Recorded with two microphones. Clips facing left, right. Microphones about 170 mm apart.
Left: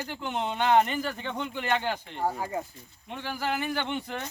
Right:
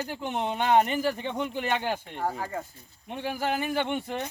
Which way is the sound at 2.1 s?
10° left (ahead or behind).